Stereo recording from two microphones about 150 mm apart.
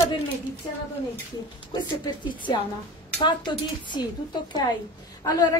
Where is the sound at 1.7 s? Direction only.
30° left (ahead or behind).